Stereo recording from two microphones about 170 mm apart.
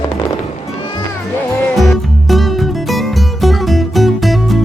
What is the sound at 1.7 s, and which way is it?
Music, centre (ahead or behind).